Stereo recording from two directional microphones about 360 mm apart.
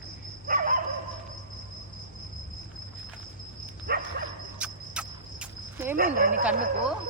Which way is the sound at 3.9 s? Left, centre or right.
Right.